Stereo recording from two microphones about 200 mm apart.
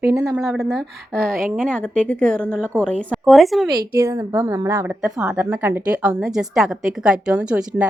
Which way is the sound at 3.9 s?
15° right (ahead or behind).